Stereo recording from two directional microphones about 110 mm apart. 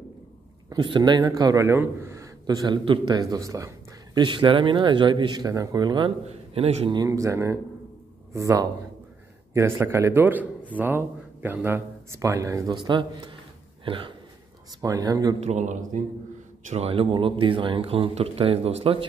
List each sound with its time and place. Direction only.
0.7 s a man's voice: 45° right (ahead or behind); by 2.2 s 25° right (ahead or behind)
2.4 s speech: 40° right (ahead or behind)
3.1 s speech: 35° right (ahead or behind)
4.2 s speech: 45° right (ahead or behind)
5.5 s a man's voice: 30° right (ahead or behind)
6.5 s speech: 65° right (ahead or behind)
7.1 s a man's voice: 30° right (ahead or behind); by 14.1 s 50° right (ahead or behind)
14.8 s a man's voice: 35° right (ahead or behind)
15.4 s a man's voice: 90° right
16.6 s speech: 70° right (ahead or behind)